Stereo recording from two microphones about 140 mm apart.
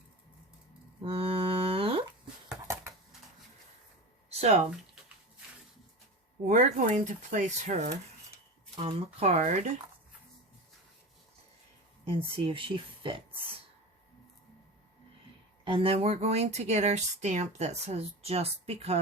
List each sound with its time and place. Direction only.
1.0 s a sound: 45° right (ahead or behind)
2.7 s typing: 20° right (ahead or behind)
4.4 s speech: 55° right (ahead or behind)
6.4 s speech: 60° right (ahead or behind)
8.7 s speech: 45° right (ahead or behind)
12.0 s speech: 40° right (ahead or behind)
15.6 s speech: 40° right (ahead or behind)